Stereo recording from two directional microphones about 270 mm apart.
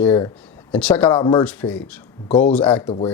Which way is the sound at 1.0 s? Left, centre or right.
Centre.